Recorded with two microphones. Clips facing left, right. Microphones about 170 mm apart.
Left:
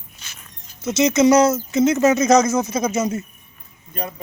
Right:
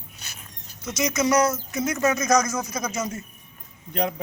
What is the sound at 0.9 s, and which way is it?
Speech, 25° left (ahead or behind).